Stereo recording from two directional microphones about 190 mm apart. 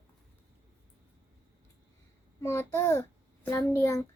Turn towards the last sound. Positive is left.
turn(degrees=20)  # may be behind; listen again after turning